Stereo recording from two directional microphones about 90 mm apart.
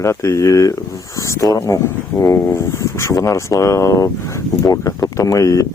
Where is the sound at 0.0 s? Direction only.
35° left (ahead or behind).